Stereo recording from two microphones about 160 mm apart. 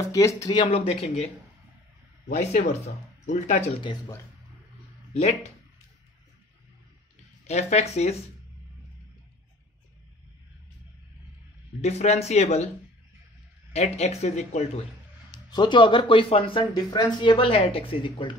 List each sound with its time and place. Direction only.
0.1 s speech: 20° left (ahead or behind); by 3.6 s 50° left (ahead or behind)
7.4 s speech: 45° left (ahead or behind)
11.8 s speech: 45° left (ahead or behind)
13.7 s speech: 40° left (ahead or behind)
15.3 s speech: 30° left (ahead or behind)